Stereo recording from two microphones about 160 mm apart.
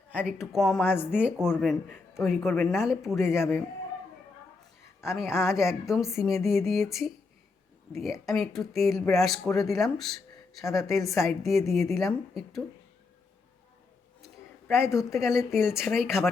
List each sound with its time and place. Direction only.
0.1 s speech: 10° right (ahead or behind)
0.8 s speech: 10° left (ahead or behind)
1.1 s speech: 5° right (ahead or behind)
5.0 s speech: 5° right (ahead or behind)
8.3 s speech: centre (ahead or behind)
14.7 s speech: 5° right (ahead or behind)